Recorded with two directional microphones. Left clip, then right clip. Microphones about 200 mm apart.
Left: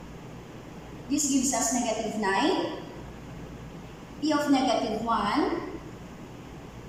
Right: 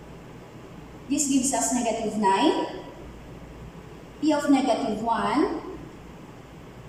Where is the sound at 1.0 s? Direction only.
15° right (ahead or behind).